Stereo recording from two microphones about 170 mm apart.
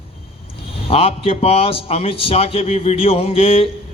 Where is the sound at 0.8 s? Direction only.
35° left (ahead or behind).